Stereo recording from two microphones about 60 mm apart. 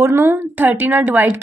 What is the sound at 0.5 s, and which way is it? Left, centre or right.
Speech, right.